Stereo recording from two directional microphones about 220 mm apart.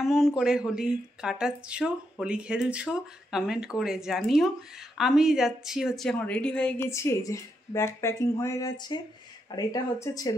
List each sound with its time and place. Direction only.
0.0 s speech: centre (ahead or behind); by 10.3 s 15° left (ahead or behind)